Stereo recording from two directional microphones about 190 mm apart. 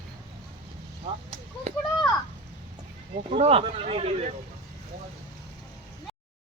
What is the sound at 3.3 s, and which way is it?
Speech, 30° right (ahead or behind).